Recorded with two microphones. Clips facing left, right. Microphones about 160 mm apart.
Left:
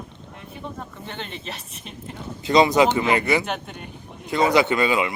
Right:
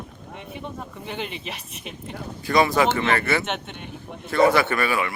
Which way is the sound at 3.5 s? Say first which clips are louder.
Even; centre (ahead or behind).